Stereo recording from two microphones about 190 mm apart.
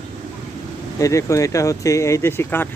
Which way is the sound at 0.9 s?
15° left (ahead or behind).